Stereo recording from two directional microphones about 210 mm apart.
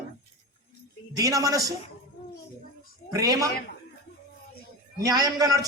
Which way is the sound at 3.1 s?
15° right (ahead or behind).